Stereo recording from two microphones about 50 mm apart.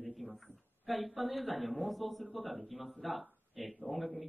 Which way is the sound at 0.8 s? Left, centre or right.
Centre.